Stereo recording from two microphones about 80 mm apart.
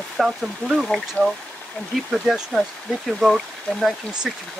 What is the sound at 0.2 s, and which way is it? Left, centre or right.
Speech, centre.